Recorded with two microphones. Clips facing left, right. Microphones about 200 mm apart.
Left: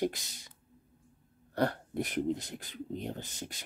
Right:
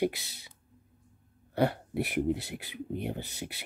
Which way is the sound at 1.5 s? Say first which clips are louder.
Right 3 dB; 5° right (ahead or behind).